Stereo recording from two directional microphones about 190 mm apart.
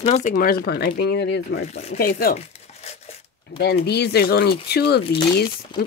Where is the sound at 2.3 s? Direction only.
35° left (ahead or behind).